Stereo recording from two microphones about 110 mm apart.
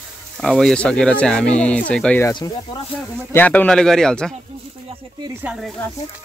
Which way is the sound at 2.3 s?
45° left (ahead or behind).